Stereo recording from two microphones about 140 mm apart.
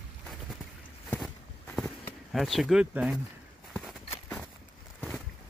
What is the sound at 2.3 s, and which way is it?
Speech, centre (ahead or behind).